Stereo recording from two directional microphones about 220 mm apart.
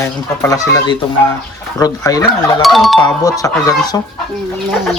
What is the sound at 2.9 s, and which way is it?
Speech, 15° left (ahead or behind).